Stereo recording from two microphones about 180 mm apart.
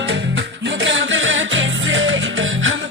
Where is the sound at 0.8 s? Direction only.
90° right.